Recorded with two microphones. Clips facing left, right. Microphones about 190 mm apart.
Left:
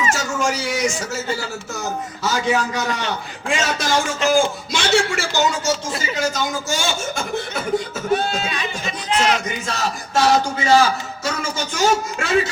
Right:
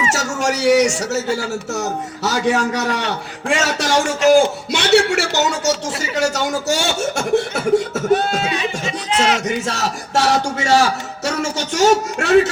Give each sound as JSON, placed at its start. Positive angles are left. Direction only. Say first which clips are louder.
{"t": 0.1, "sound": "a sound", "louder": "right 2 dB", "side_deg": -75}
{"t": 2.2, "sound": "a man's voice", "louder": "right 3 dB", "side_deg": -75}
{"t": 9.4, "sound": "a man's voice", "louder": "right 4 dB", "side_deg": -75}